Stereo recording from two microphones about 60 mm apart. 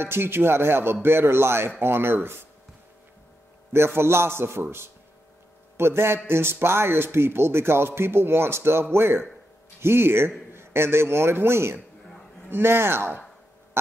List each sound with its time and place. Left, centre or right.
0.0 s speech: right
3.7 s a man's voice: right